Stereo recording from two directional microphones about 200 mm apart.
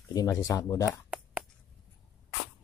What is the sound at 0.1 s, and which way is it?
Speech, 20° left (ahead or behind).